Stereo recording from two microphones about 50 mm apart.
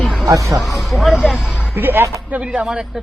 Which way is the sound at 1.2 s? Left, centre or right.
Centre.